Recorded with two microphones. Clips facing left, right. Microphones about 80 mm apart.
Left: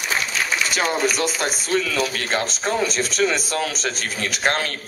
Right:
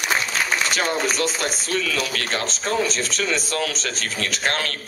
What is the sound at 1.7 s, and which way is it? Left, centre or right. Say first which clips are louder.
Speech: left 4 dB; left.